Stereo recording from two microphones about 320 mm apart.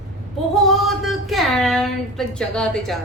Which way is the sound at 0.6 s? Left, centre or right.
Centre.